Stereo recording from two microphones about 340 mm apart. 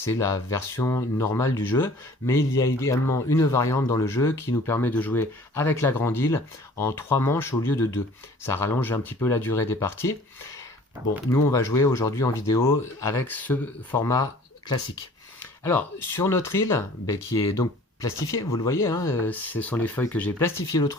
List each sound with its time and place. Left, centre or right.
0.1 s speech: centre
11.3 s speech: centre
15.4 s speech: centre